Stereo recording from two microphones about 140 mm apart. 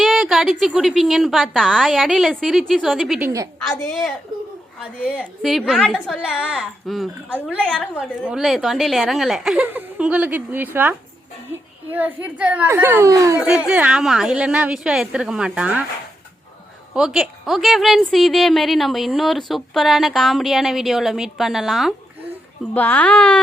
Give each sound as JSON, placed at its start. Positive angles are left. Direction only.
{"t": 0.0, "sound": "a woman's voice", "side_deg": 0}
{"t": 3.2, "sound": "a woman's voice", "side_deg": -20}
{"t": 3.7, "sound": "a woman's voice", "side_deg": 0}
{"t": 5.1, "sound": "a woman's voice", "side_deg": 0}
{"t": 7.3, "sound": "a woman's voice", "side_deg": -10}
{"t": 13.4, "sound": "a woman's voice", "side_deg": -5}
{"t": 16.9, "sound": "a woman's voice", "side_deg": -5}
{"t": 22.7, "sound": "a child's voice", "side_deg": 10}